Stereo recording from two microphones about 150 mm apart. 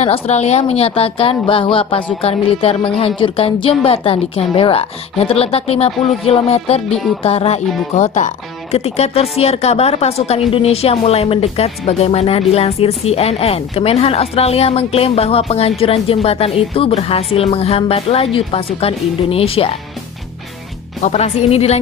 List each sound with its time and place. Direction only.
0.0 s a woman's voice: 45° left (ahead or behind)
21.0 s a woman's voice: 45° left (ahead or behind)